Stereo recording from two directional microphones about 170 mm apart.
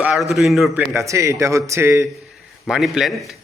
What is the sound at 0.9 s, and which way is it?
A man's voice, 20° right (ahead or behind).